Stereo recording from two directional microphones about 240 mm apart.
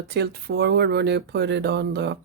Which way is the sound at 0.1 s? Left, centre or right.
Right.